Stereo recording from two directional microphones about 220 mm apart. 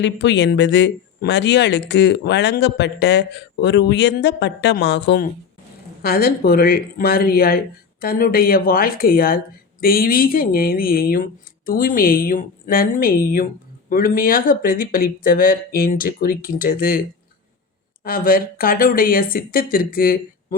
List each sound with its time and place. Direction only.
0.0 s speech: 55° left (ahead or behind)
18.0 s speech: 40° left (ahead or behind)